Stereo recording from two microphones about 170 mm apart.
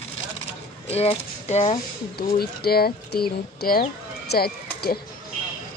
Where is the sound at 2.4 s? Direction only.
65° left (ahead or behind).